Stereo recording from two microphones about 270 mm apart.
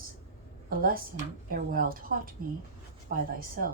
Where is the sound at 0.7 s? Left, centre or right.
Right.